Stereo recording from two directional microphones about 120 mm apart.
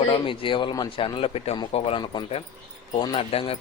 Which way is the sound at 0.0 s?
50° left (ahead or behind).